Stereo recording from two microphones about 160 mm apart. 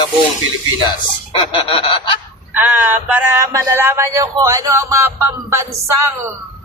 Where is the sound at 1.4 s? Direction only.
35° left (ahead or behind).